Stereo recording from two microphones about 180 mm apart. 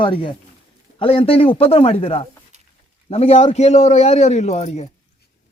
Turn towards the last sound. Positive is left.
turn(degrees=40)  # may be behind; listen again after turning